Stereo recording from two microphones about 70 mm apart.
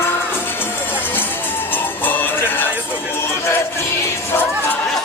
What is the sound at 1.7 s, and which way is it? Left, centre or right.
Music, left.